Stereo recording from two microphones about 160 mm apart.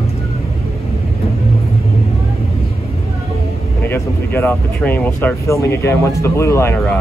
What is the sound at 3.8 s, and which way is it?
Speech, 15° left (ahead or behind).